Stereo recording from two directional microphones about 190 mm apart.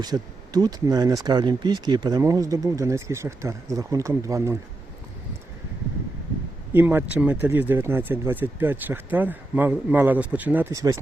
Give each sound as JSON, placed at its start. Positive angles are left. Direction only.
{"t": 0.0, "sound": "speech", "side_deg": -20}
{"t": 6.7, "sound": "speech", "side_deg": -10}